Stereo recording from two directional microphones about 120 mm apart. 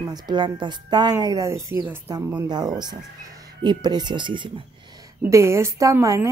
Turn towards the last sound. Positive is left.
turn(degrees=-25)  # may be behind; listen again after turning